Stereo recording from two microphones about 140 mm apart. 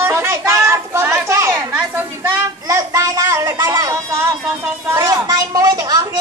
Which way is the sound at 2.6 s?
25° right (ahead or behind).